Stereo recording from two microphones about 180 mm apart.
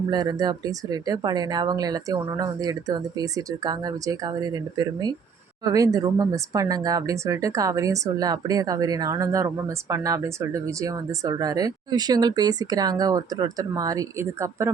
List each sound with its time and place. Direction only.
0.1 s speech: 20° right (ahead or behind)